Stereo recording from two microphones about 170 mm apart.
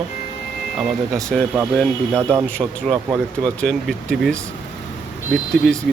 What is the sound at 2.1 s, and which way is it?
Speech, 15° right (ahead or behind).